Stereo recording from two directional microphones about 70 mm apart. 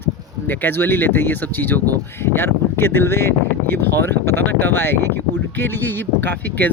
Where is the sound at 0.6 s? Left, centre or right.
Left.